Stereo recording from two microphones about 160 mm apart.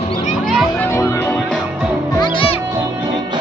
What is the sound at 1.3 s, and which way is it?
Music, centre (ahead or behind).